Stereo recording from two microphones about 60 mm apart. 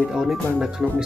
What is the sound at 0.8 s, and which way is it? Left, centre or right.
Speech, centre.